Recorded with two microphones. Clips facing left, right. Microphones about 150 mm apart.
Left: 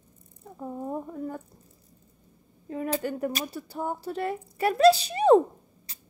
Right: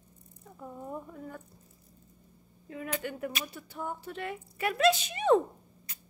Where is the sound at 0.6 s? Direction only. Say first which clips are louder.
Left 7 dB; 35° left (ahead or behind).